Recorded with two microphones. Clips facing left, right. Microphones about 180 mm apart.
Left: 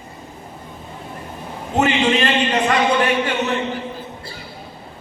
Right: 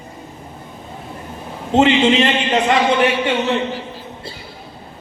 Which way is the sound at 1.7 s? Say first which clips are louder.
Right 4 dB; 25° right (ahead or behind).